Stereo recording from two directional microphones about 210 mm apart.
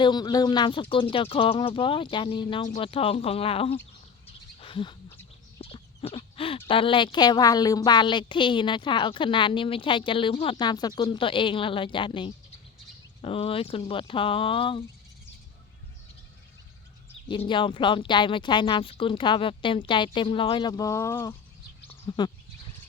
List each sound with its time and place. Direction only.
0.0 s a woman's voice: 20° left (ahead or behind)
4.6 s bird: 25° left (ahead or behind)
5.5 s chicken: 25° left (ahead or behind)
6.7 s a woman's voice: 25° left (ahead or behind)
17.2 s a woman's voice: 25° left (ahead or behind)